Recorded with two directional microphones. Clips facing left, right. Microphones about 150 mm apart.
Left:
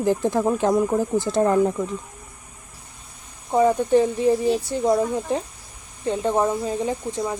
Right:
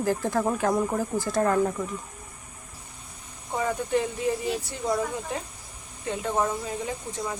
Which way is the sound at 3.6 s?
35° left (ahead or behind).